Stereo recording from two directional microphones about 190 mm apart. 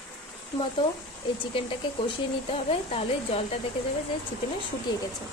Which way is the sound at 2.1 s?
30° left (ahead or behind).